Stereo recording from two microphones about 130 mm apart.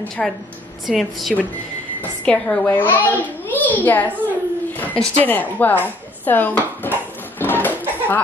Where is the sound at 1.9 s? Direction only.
10° left (ahead or behind).